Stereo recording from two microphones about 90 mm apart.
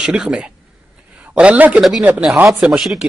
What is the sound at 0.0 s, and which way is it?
A man's voice, 10° right (ahead or behind).